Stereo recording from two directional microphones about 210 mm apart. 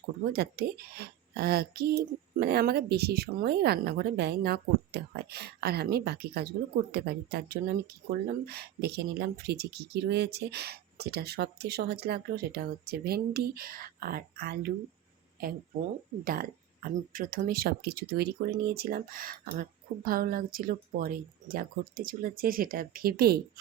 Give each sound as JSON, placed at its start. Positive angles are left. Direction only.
{"t": 0.3, "sound": "speech", "side_deg": -50}